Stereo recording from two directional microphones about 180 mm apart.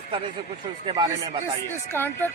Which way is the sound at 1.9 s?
10° left (ahead or behind).